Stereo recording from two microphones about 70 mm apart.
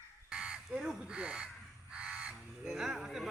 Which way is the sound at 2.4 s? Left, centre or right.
Centre.